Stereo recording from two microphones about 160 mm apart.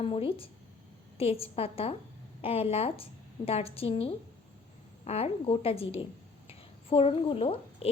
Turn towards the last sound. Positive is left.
turn(degrees=35)  # may be behind; listen again after turning